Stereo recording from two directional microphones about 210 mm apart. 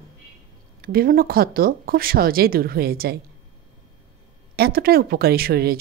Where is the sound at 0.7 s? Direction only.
45° right (ahead or behind).